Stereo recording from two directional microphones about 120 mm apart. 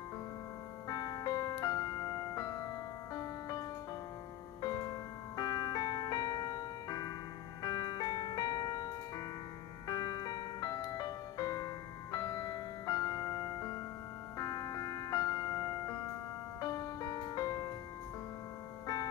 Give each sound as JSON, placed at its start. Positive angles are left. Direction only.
{"t": 0.8, "sound": "music", "side_deg": 35}